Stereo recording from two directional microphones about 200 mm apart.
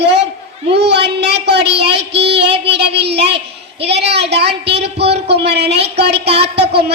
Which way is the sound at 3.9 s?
55° right (ahead or behind).